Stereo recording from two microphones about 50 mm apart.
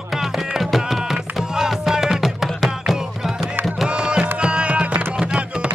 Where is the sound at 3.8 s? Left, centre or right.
Centre.